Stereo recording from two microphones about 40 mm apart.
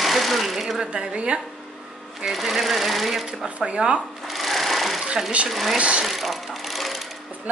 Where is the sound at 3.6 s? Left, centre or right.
Right.